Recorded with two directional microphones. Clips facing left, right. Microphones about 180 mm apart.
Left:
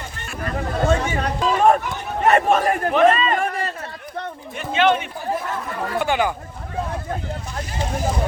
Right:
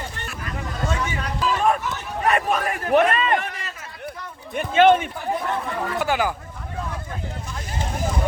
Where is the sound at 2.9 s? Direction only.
55° right (ahead or behind).